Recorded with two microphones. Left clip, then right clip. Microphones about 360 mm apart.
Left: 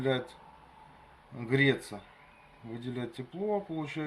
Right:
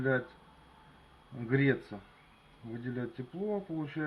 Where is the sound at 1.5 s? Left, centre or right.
Centre.